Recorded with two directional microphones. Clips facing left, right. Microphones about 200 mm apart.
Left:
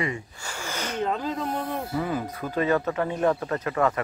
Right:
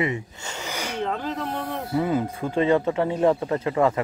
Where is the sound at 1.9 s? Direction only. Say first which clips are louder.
Right 5 dB; 25° right (ahead or behind).